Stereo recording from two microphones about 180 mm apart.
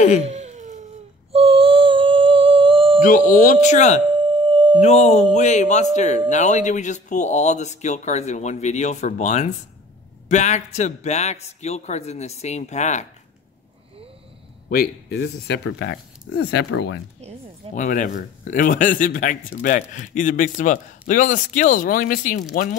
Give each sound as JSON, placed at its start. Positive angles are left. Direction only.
{"t": 0.2, "sound": "a sound", "side_deg": -40}
{"t": 3.0, "sound": "speech", "side_deg": 50}
{"t": 4.1, "sound": "a sound", "side_deg": -25}
{"t": 4.8, "sound": "a man's voice", "side_deg": 40}
{"t": 14.7, "sound": "speech", "side_deg": 60}
{"t": 17.7, "sound": "speech", "side_deg": 45}